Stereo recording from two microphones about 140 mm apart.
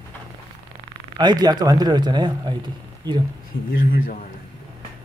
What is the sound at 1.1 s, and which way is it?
Speech, 30° right (ahead or behind).